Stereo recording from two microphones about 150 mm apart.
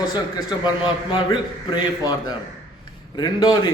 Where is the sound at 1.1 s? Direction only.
30° left (ahead or behind).